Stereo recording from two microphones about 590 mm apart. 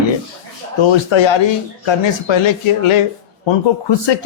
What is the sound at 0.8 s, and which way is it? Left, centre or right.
Speech, left.